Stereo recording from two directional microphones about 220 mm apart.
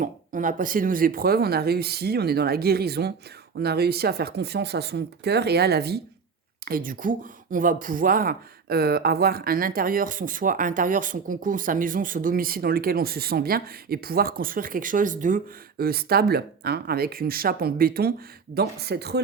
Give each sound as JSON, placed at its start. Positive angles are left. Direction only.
{"t": 0.0, "sound": "speech", "side_deg": -35}